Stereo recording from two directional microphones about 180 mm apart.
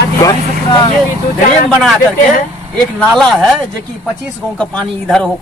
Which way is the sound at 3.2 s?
5° left (ahead or behind).